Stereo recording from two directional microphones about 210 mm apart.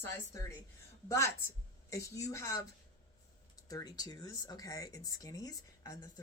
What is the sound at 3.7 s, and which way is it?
Speech, 15° left (ahead or behind).